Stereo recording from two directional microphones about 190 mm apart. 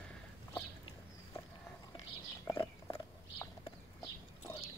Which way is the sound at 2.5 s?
20° left (ahead or behind).